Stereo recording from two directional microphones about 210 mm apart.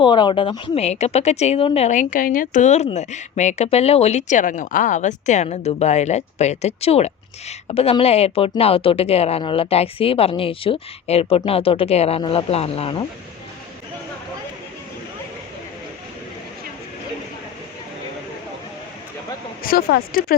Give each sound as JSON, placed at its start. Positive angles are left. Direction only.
{"t": 0.0, "sound": "a woman's voice", "side_deg": 20}
{"t": 19.6, "sound": "speech", "side_deg": 45}